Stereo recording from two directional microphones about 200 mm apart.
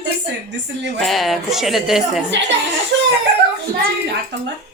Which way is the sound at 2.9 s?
60° right (ahead or behind).